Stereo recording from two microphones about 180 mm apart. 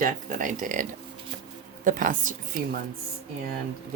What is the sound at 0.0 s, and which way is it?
Speech, 50° right (ahead or behind).